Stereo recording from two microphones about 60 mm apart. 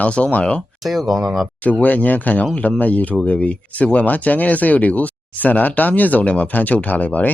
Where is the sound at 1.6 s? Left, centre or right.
Left.